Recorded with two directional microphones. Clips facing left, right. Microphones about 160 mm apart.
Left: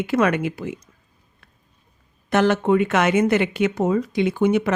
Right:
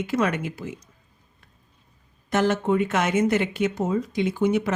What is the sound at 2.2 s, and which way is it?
Speech, 70° left (ahead or behind).